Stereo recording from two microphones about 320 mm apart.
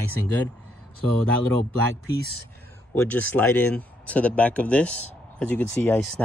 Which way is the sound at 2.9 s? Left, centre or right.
Centre.